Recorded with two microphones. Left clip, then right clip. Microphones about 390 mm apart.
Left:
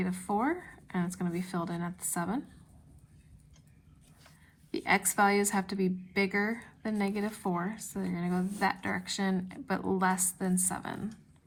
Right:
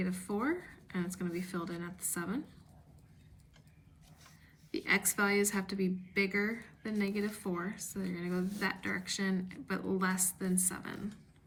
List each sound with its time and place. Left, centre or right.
0.0 s a sound: centre
1.6 s a woman's voice: centre
4.7 s a woman's voice: centre